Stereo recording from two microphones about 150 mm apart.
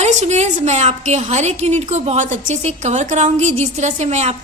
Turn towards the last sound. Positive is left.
turn(degrees=-50)  # may be behind; listen again after turning